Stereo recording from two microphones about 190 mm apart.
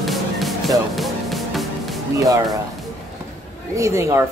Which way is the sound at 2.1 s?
15° right (ahead or behind).